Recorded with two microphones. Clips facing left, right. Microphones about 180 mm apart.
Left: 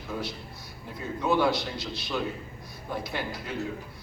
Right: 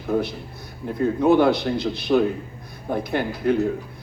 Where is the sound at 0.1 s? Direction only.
60° right (ahead or behind).